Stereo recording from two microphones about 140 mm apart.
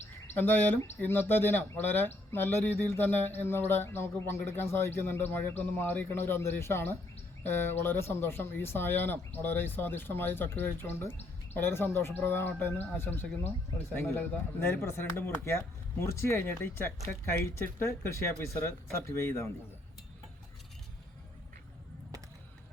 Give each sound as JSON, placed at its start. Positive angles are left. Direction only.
{"t": 0.3, "sound": "speech", "side_deg": 15}